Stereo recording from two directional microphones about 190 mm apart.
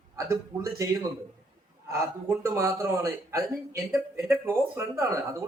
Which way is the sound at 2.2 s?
15° right (ahead or behind).